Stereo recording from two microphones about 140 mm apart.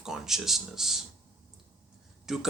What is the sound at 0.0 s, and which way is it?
Speech, 5° right (ahead or behind).